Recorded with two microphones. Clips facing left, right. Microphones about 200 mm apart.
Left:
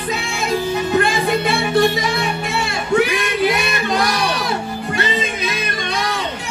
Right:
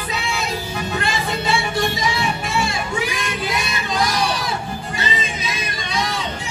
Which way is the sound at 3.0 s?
65° left (ahead or behind).